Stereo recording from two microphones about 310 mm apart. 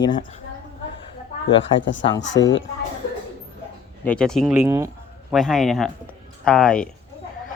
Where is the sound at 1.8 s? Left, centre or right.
Left.